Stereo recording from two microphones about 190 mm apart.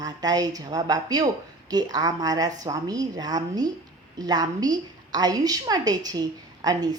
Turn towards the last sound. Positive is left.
turn(degrees=-20)  # may be behind; listen again after turning